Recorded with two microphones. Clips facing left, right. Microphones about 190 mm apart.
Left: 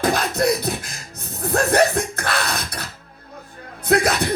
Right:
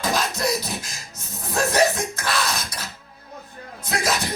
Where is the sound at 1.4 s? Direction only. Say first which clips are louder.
Left 3 dB; 60° left (ahead or behind).